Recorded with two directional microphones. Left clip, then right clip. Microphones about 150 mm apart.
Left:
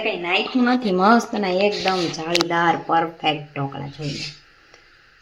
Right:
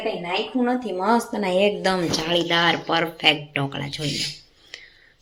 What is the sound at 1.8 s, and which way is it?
Speech, 15° right (ahead or behind).